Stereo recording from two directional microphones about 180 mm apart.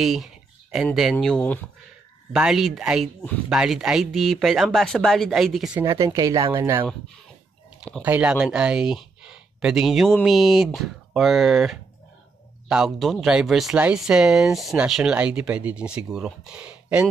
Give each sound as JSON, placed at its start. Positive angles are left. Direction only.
{"t": 0.0, "sound": "a sound", "side_deg": 0}
{"t": 1.1, "sound": "speech", "side_deg": 5}
{"t": 2.3, "sound": "speech", "side_deg": -5}
{"t": 5.9, "sound": "speech", "side_deg": -20}
{"t": 8.0, "sound": "speech", "side_deg": -5}